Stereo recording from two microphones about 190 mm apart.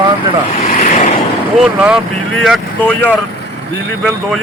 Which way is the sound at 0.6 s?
40° left (ahead or behind).